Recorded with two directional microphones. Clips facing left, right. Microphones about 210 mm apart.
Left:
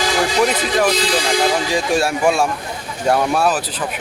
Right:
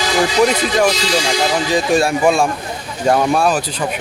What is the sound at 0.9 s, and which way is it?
Speech, 55° left (ahead or behind).